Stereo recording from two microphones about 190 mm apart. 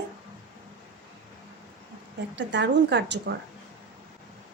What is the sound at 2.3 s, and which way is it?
Speech, 70° right (ahead or behind).